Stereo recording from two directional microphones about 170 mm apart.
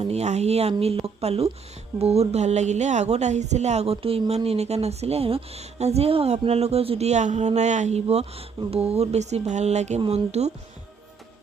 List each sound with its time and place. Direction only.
0.0 s a woman's voice: 40° right (ahead or behind)